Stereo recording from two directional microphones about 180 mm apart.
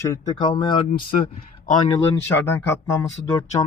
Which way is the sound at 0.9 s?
55° left (ahead or behind).